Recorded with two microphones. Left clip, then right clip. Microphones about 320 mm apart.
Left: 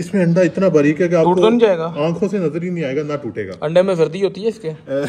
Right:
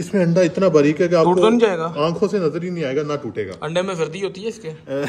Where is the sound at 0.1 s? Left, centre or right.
Right.